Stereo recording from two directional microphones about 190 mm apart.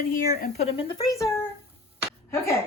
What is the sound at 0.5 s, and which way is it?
Speech, 35° left (ahead or behind).